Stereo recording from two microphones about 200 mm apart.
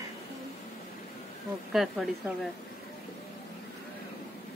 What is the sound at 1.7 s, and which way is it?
Speech, centre (ahead or behind).